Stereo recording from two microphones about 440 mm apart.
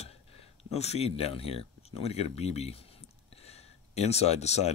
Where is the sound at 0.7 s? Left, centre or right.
Centre.